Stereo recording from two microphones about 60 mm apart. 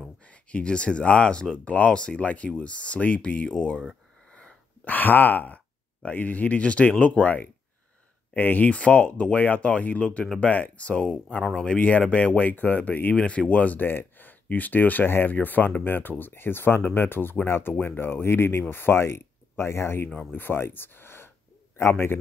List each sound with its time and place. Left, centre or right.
0.3 s speech: centre
4.3 s wheeze: centre
4.8 s speech: left; by 11.7 s centre
11.7 s speech: left
13.8 s speech: left